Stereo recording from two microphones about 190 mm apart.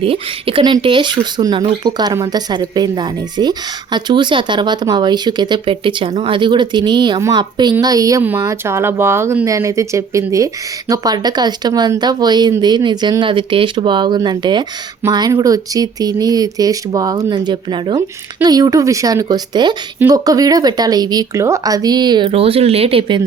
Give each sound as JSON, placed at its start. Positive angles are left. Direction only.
{"t": 0.0, "sound": "speech", "side_deg": -30}